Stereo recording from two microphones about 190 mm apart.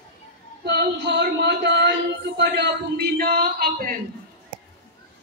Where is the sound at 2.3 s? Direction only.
65° right (ahead or behind).